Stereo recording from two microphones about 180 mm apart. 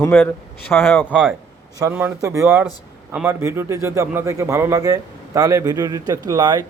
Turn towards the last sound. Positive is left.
turn(degrees=-20)  # may be behind; listen again after turning